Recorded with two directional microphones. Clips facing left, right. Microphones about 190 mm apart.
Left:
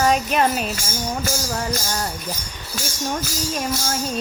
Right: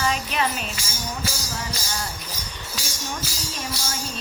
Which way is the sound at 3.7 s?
45° left (ahead or behind).